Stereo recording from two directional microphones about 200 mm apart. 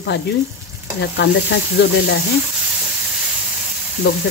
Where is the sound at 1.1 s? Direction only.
60° left (ahead or behind).